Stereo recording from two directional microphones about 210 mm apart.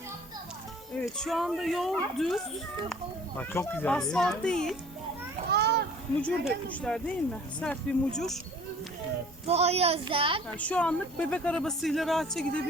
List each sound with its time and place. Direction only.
0.9 s speech: centre (ahead or behind)
5.5 s a sound: 50° right (ahead or behind)
6.2 s speech: 5° left (ahead or behind)
9.5 s a child's voice: 30° right (ahead or behind)
10.6 s speech: 5° left (ahead or behind)